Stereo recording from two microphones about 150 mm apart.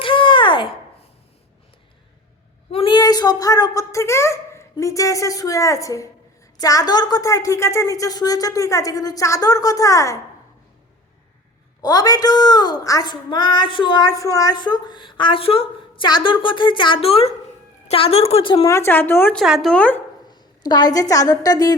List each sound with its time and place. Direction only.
0.0 s a sound: 35° left (ahead or behind)
2.6 s a woman's voice: 35° left (ahead or behind); by 10.2 s 20° left (ahead or behind)
11.8 s a woman's voice: 25° left (ahead or behind)
18.6 s speech: 20° left (ahead or behind)
19.4 s a woman's voice: centre (ahead or behind)
20.3 s a woman's voice: 25° left (ahead or behind)